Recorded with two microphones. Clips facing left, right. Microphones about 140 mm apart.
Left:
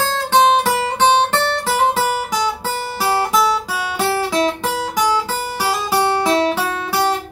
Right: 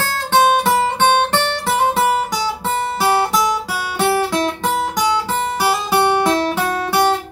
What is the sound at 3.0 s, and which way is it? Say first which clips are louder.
Guitar: even; centre (ahead or behind).